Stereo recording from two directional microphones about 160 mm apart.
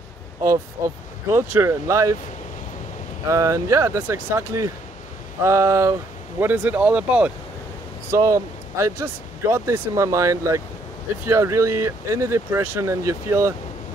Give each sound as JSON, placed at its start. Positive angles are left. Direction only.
{"t": 0.5, "sound": "speech", "side_deg": -15}
{"t": 3.3, "sound": "speech", "side_deg": -20}
{"t": 8.1, "sound": "speech", "side_deg": -20}